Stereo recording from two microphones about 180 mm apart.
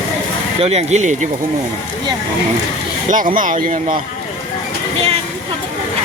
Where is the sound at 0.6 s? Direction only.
35° right (ahead or behind).